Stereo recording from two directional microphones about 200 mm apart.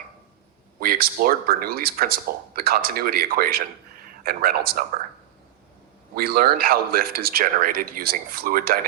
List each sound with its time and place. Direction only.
0.8 s a man's voice: 50° right (ahead or behind)
6.1 s a man's voice: 50° right (ahead or behind)